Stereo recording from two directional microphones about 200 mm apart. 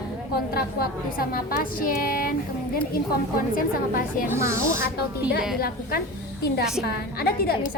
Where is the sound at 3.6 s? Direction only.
45° left (ahead or behind).